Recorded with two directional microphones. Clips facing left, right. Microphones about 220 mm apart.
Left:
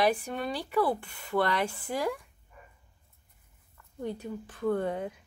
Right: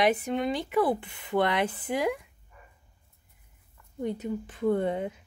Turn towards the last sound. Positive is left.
turn(degrees=-20)  # may be behind; listen again after turning